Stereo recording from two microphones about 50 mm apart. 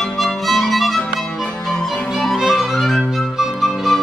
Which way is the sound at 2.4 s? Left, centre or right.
Centre.